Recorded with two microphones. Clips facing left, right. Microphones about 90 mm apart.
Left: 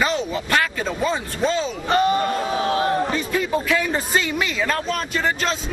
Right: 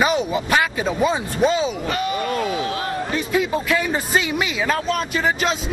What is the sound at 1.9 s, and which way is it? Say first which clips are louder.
Speech: left 4 dB; 35° left (ahead or behind).